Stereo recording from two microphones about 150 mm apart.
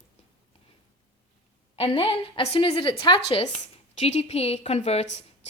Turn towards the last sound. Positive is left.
turn(degrees=45)  # may be behind; listen again after turning